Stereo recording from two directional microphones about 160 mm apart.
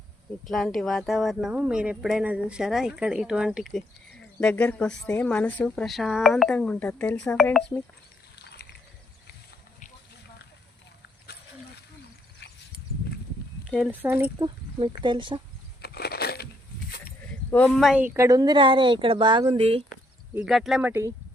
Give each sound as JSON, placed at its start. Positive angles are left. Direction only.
{"t": 0.4, "sound": "speech", "side_deg": 0}
{"t": 8.4, "sound": "pulleys", "side_deg": 90}
{"t": 13.7, "sound": "speech", "side_deg": 0}
{"t": 14.3, "sound": "speech", "side_deg": -30}
{"t": 15.8, "sound": "crushing", "side_deg": 80}
{"t": 17.5, "sound": "speech", "side_deg": 5}
{"t": 18.0, "sound": "speech", "side_deg": -15}
{"t": 20.3, "sound": "speech", "side_deg": -5}